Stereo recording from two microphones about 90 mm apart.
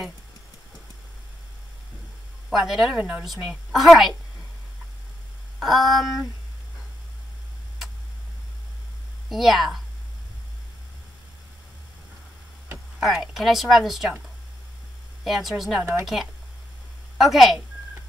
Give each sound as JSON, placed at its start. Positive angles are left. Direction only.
{"t": 2.5, "sound": "a woman's voice", "side_deg": -5}
{"t": 3.0, "sound": "speech", "side_deg": -15}
{"t": 3.3, "sound": "a woman's voice", "side_deg": -5}
{"t": 5.6, "sound": "a woman's voice", "side_deg": 0}
{"t": 9.3, "sound": "a woman's voice", "side_deg": 0}
{"t": 13.0, "sound": "a woman's voice", "side_deg": 0}
{"t": 15.2, "sound": "a woman's voice", "side_deg": 0}
{"t": 15.8, "sound": "speech", "side_deg": -30}
{"t": 17.2, "sound": "a woman's voice", "side_deg": 0}